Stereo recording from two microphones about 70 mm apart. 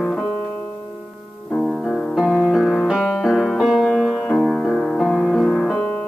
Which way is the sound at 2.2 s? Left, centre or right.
Centre.